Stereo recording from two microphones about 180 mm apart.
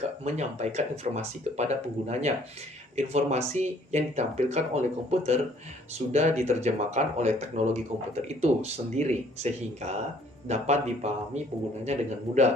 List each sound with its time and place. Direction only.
0.3 s speech: 40° right (ahead or behind)